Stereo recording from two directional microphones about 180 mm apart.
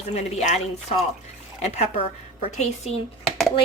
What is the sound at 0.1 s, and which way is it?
A woman's voice, 35° left (ahead or behind).